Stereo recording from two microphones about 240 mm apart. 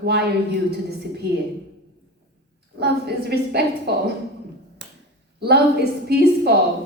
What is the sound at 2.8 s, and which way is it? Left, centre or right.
A woman's voice, right.